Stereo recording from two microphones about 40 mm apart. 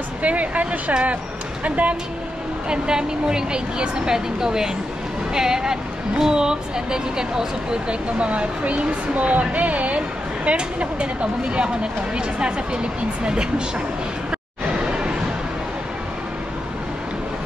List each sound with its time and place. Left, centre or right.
0.2 s speech: right
2.7 s a woman's voice: centre
8.2 s speech: right
14.7 s a sound: right